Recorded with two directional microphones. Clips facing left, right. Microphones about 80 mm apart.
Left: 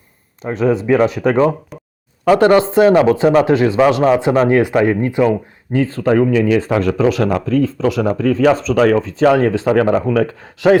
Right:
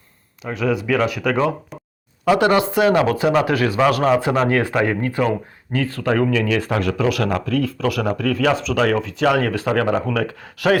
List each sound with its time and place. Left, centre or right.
0.4 s speech: left
2.2 s speech: left
2.5 s speech: left